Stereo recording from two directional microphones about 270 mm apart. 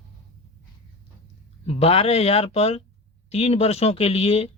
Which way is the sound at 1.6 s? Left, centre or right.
Left.